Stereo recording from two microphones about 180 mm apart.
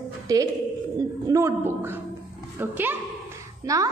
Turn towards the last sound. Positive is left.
turn(degrees=-20)  # may be behind; listen again after turning